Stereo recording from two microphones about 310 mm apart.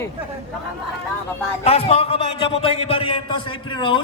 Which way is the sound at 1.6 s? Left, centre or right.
Centre.